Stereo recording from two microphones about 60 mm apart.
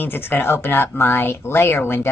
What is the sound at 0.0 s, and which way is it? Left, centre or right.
Speech, left.